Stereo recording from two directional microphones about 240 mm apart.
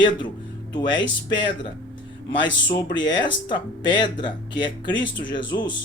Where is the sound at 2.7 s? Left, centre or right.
Centre.